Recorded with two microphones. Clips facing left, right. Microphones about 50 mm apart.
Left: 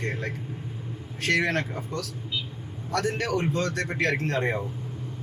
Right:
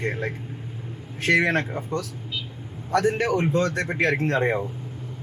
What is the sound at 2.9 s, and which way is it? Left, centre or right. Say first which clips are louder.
Speech: right 5 dB; right.